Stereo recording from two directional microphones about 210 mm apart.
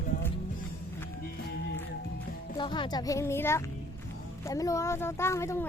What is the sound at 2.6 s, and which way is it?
Speech, 20° left (ahead or behind).